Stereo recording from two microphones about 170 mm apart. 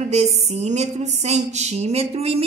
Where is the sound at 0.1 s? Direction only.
40° right (ahead or behind).